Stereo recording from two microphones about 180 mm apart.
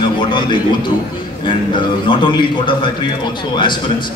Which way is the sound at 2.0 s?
25° left (ahead or behind).